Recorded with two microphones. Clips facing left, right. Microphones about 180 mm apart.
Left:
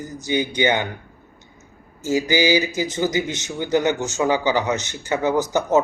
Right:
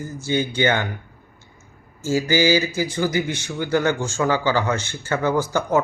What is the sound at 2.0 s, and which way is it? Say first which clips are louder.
A man's voice: even; 20° left (ahead or behind).